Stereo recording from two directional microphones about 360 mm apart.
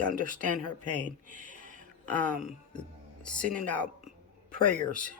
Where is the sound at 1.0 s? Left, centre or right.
Right.